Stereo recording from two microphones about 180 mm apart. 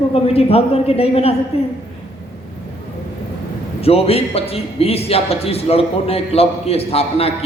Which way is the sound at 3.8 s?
35° left (ahead or behind).